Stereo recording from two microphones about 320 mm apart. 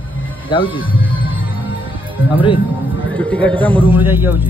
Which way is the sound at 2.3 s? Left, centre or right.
Centre.